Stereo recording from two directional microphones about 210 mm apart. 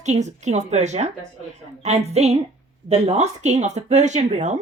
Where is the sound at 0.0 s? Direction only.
35° right (ahead or behind).